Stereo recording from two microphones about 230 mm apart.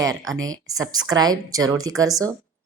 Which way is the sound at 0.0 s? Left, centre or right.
Centre.